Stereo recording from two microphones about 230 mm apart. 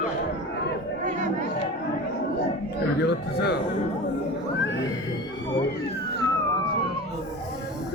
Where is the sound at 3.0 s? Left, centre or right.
Left.